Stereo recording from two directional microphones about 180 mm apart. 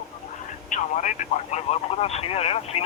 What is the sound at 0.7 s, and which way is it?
Speech, 45° left (ahead or behind).